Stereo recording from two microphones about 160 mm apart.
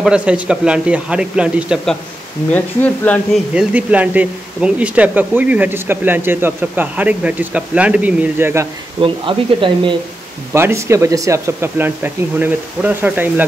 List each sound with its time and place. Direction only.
0.0 s speech: 5° right (ahead or behind)
2.5 s speech: 10° left (ahead or behind)
3.5 s speech: 10° right (ahead or behind)
9.0 s speech: 30° right (ahead or behind)
10.5 s speech: 15° right (ahead or behind)